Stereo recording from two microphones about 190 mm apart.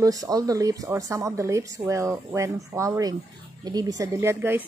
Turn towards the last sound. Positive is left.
turn(degrees=-10)  # may be behind; listen again after turning